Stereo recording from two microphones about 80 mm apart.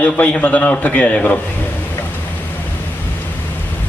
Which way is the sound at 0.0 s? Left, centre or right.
Centre.